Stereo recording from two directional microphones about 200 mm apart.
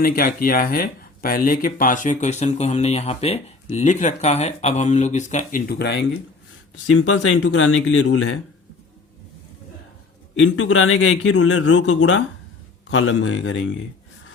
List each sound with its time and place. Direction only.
0.0 s speech: 45° left (ahead or behind)
6.8 s speech: 90° left
10.3 s a man's voice: 75° left (ahead or behind)